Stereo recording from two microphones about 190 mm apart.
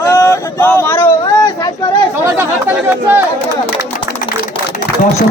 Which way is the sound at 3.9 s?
50° left (ahead or behind).